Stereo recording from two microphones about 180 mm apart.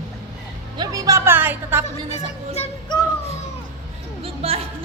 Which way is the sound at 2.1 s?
35° left (ahead or behind).